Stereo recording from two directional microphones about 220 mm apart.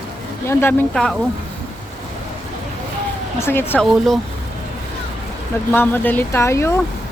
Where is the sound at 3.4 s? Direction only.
10° left (ahead or behind).